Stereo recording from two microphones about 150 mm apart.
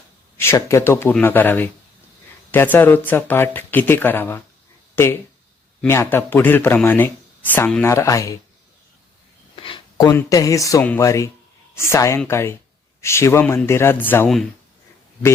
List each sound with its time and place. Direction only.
0.3 s speech: 20° left (ahead or behind)
5.9 s speech: 15° left (ahead or behind)
9.6 s a sound: 35° left (ahead or behind)
10.2 s a man's voice: 20° left (ahead or behind)